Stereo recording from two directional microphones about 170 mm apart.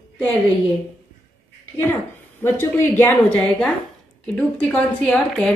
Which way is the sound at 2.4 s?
15° left (ahead or behind).